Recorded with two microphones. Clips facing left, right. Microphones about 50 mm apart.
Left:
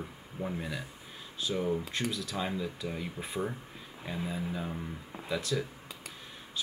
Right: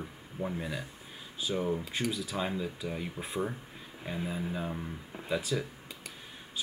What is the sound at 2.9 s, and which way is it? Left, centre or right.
Speech, centre.